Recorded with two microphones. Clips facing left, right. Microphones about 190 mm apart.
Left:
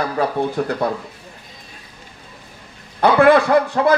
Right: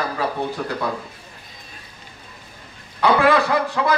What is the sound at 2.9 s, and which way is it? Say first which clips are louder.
A man's voice: left 4 dB; 50° left (ahead or behind).